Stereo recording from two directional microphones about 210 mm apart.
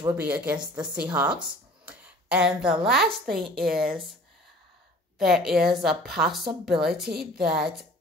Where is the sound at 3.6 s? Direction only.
45° right (ahead or behind).